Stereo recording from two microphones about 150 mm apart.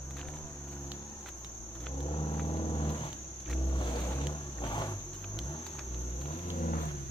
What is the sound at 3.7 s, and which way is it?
Music, 35° left (ahead or behind).